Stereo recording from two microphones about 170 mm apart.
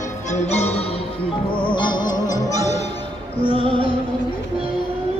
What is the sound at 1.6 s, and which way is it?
Music, 30° left (ahead or behind).